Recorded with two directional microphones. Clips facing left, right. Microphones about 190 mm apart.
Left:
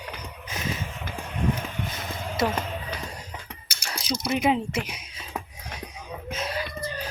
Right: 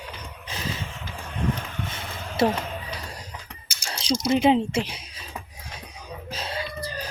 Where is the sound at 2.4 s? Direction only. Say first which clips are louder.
Right 4 dB; 30° right (ahead or behind).